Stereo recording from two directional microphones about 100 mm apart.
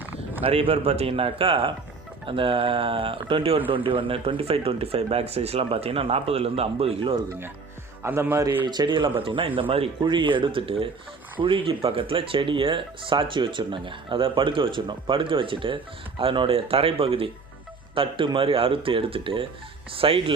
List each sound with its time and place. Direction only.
0.0 s a sound: 15° right (ahead or behind)
0.4 s a man's voice: 70° right (ahead or behind); by 6.9 s 85° right
8.0 s a man's voice: 25° right (ahead or behind)
8.6 s speech: 45° right (ahead or behind)
9.1 s speech: 60° right (ahead or behind)
10.0 s speech: 55° right (ahead or behind)